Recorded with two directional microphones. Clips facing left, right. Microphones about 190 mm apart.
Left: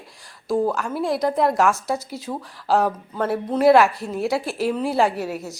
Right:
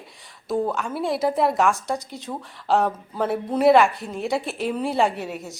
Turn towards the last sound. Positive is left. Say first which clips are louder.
# left 3 dB
turn(degrees=0)  # may be behind; listen again after turning